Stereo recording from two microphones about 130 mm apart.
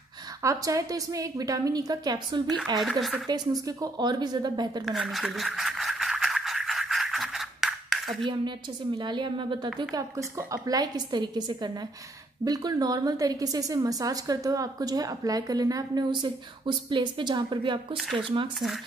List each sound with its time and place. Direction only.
0.4 s a woman's voice: 25° right (ahead or behind)
2.8 s speech: centre (ahead or behind)
3.3 s a woman's voice: 30° right (ahead or behind)
4.8 s a sound: centre (ahead or behind)
8.2 s a woman's voice: 35° right (ahead or behind)
9.9 s a woman's voice: 25° right (ahead or behind); by 18.5 s 40° right (ahead or behind)